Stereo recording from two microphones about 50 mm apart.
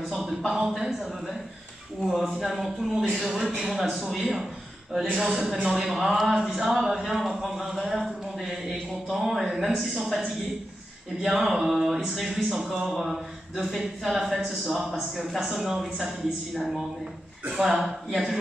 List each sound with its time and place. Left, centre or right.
0.1 s a sound: centre
0.5 s a man's voice: centre
2.0 s a man's voice: centre
15.1 s speech: centre
17.6 s speech: centre